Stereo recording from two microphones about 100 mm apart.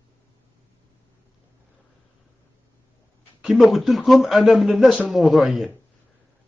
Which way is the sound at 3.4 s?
Centre (ahead or behind).